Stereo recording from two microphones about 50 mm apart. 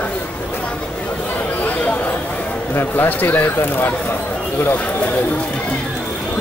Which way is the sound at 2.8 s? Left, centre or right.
Left.